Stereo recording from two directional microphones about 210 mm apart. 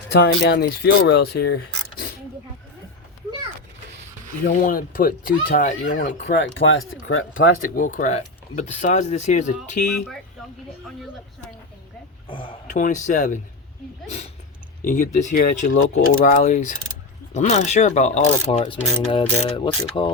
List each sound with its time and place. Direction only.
0.1 s speech: 50° left (ahead or behind)
4.4 s speech: 45° left (ahead or behind)
5.9 s speech: 55° left (ahead or behind); by 7.4 s 70° left (ahead or behind)
7.6 s speech: 40° left (ahead or behind)
12.6 s speech: 35° left (ahead or behind)
14.8 s speech: 35° left (ahead or behind)